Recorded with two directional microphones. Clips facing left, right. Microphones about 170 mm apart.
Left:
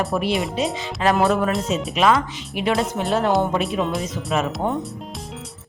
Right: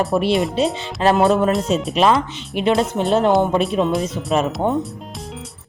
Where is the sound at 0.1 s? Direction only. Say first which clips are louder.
Right 4 dB; 30° right (ahead or behind).